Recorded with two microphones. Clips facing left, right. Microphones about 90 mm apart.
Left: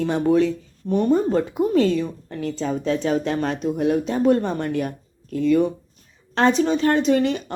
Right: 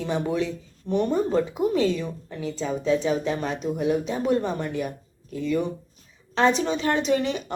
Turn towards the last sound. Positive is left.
turn(degrees=45)  # may be behind; listen again after turning